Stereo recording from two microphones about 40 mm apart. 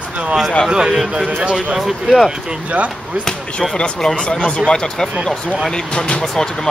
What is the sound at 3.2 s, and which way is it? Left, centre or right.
Speech, centre.